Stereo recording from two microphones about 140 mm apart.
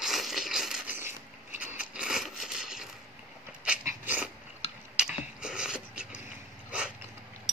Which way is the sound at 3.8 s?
10° right (ahead or behind).